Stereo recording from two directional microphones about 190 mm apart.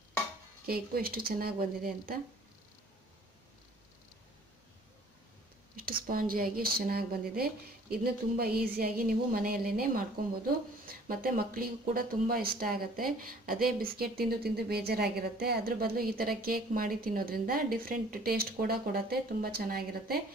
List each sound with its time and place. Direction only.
0.7 s a woman's voice: 55° right (ahead or behind)
6.0 s a woman's voice: 50° right (ahead or behind)